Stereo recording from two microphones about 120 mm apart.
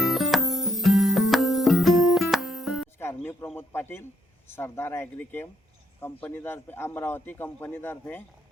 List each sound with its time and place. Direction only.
0.0 s music: centre (ahead or behind)
3.0 s a sound: 20° left (ahead or behind)
4.4 s a man's voice: 20° left (ahead or behind)